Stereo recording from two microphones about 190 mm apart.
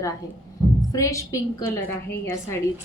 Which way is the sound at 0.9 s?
15° left (ahead or behind).